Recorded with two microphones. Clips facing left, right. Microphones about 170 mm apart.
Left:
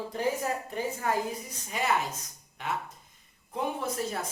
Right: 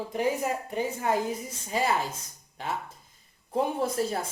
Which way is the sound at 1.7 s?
30° right (ahead or behind).